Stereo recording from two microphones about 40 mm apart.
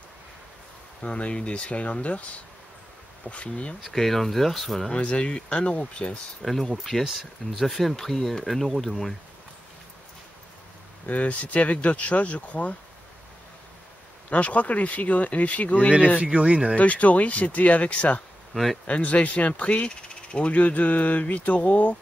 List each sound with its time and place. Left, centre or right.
1.0 s speech: left
3.8 s speech: centre
4.9 s speech: left
6.4 s speech: centre
11.1 s speech: left
14.3 s speech: left
16.3 s speech: right
16.7 s speech: left
18.5 s speech: centre
18.9 s speech: left